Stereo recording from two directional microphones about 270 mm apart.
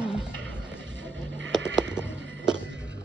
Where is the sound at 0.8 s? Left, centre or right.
Right.